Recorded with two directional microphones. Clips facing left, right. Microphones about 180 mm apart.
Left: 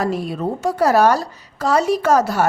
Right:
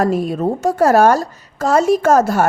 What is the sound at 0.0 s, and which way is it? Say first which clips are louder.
A woman's voice: right 5 dB; 45° right (ahead or behind).